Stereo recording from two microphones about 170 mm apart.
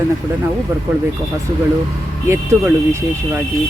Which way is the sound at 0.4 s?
10° right (ahead or behind).